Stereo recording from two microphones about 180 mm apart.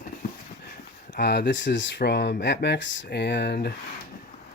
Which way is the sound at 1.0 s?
70° left (ahead or behind).